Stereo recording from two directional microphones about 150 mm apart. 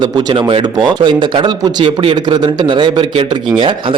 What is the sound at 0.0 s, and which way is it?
A man's voice, 30° right (ahead or behind).